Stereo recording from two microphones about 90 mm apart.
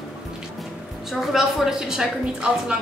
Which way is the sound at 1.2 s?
5° right (ahead or behind).